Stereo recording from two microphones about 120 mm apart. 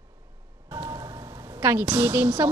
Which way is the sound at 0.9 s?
35° right (ahead or behind).